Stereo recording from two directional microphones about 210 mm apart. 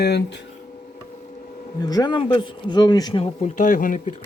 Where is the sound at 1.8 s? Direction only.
20° left (ahead or behind).